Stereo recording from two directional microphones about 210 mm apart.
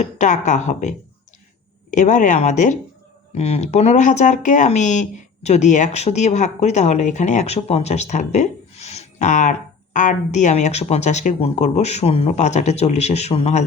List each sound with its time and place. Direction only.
0.0 s speech: 35° left (ahead or behind)